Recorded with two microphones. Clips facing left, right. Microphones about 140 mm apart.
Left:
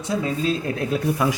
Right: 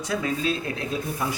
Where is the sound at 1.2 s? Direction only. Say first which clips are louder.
Left 6 dB; 80° left.